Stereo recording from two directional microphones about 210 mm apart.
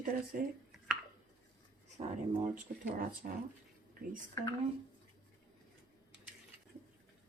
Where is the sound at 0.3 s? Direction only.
40° right (ahead or behind).